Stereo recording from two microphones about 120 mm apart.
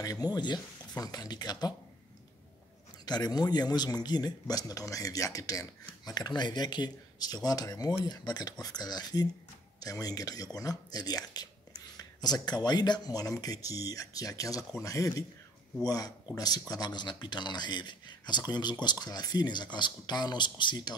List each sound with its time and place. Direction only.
0.0 s speech: 30° left (ahead or behind)
3.1 s speech: 35° left (ahead or behind)